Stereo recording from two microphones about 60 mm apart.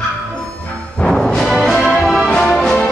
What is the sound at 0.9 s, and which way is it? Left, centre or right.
Music, centre.